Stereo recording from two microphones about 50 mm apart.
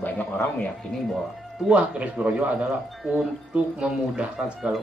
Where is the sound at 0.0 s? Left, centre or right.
Left.